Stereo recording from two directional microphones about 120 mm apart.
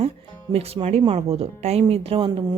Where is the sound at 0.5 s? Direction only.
55° right (ahead or behind).